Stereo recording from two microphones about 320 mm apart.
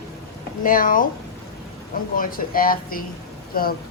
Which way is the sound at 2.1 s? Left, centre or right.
Left.